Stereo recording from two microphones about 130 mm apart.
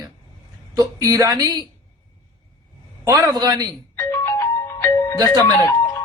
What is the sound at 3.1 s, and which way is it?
Speech, 30° right (ahead or behind).